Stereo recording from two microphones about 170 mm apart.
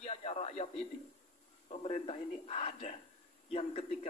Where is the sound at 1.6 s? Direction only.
40° left (ahead or behind).